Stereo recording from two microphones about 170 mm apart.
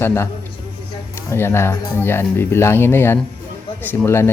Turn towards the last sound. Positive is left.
turn(degrees=15)  # may be behind; listen again after turning